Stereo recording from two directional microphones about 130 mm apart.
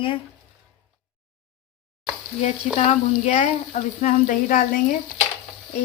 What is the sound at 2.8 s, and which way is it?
Speech, 60° left (ahead or behind).